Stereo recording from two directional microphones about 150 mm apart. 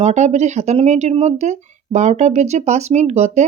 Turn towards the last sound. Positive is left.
turn(degrees=-50)  # may be behind; listen again after turning